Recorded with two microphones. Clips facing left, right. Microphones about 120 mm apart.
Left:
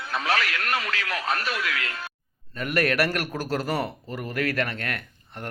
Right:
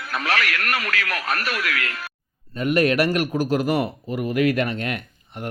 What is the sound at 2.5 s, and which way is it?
A man's voice, 20° right (ahead or behind).